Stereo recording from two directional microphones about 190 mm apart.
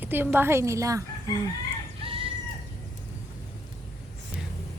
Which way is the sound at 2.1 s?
30° right (ahead or behind).